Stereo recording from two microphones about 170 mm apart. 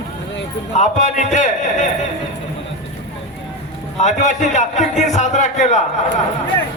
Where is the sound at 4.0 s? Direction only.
45° left (ahead or behind).